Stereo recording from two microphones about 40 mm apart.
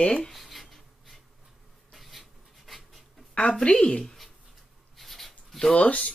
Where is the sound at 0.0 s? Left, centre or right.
Left.